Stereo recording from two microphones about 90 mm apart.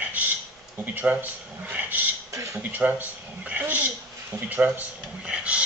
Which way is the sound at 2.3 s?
35° right (ahead or behind).